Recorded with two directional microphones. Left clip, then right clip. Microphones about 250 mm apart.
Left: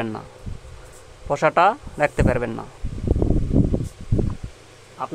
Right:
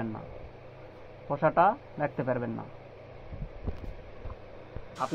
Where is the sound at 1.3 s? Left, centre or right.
Left.